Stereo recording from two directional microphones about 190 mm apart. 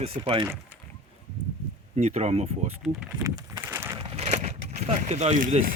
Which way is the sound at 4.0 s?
35° right (ahead or behind).